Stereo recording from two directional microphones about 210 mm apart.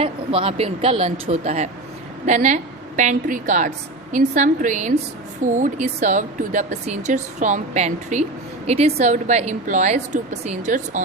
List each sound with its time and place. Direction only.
0.0 s speech: 25° right (ahead or behind)